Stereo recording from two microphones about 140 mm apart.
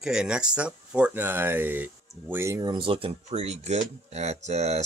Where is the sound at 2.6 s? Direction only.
35° right (ahead or behind).